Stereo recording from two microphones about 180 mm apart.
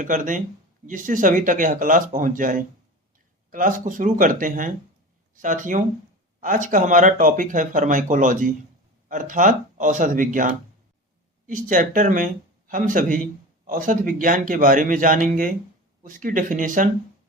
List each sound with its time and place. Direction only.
0.0 s speech: 45° right (ahead or behind)